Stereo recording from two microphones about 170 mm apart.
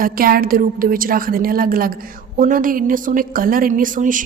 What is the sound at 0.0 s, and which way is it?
A woman's voice, 60° right (ahead or behind).